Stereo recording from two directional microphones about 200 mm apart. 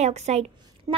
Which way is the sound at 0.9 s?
15° right (ahead or behind).